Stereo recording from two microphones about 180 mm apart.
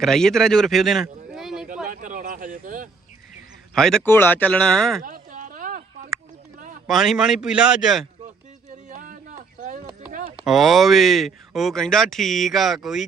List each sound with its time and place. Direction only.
0.0 s speech: centre (ahead or behind)
1.9 s speech: 50° right (ahead or behind)
3.8 s speech: 5° left (ahead or behind)
5.0 s chop: 50° right (ahead or behind)
6.8 s speech: centre (ahead or behind)
8.9 s a sound: 45° right (ahead or behind)
10.4 s speech: centre (ahead or behind)